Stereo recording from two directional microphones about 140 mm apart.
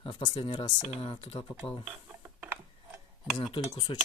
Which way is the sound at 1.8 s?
15° right (ahead or behind).